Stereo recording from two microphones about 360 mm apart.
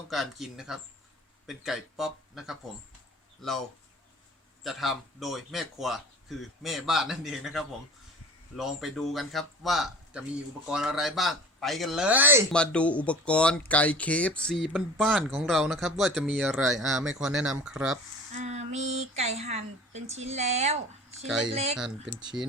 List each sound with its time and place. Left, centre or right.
0.1 s speech: centre
4.6 s speech: centre
18.3 s speech: centre
21.2 s speech: centre
21.5 s speech: centre
21.8 s speech: centre